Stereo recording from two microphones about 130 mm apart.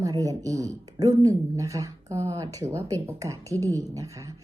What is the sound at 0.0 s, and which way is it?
Speech, 25° right (ahead or behind).